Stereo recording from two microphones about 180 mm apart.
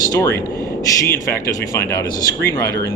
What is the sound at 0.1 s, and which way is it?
Speech, 20° left (ahead or behind).